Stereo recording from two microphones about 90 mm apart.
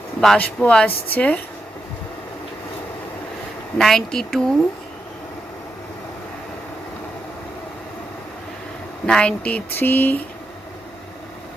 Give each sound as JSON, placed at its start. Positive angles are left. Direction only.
{"t": 0.3, "sound": "speech", "side_deg": 15}
{"t": 3.8, "sound": "speech", "side_deg": 5}
{"t": 9.0, "sound": "speech", "side_deg": 10}